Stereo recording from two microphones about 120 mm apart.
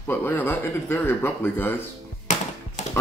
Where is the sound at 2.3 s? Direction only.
80° left.